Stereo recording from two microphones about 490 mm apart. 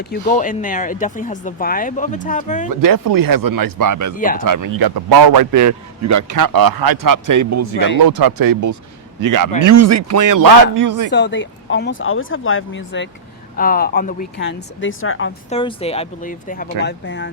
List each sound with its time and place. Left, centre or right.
0.0 s speech: centre
2.6 s a man's voice: right
11.1 s speech: left
15.4 s speech: centre